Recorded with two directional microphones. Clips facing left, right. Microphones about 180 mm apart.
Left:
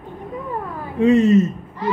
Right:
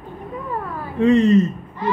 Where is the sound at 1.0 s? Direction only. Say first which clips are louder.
Even; 5° left (ahead or behind).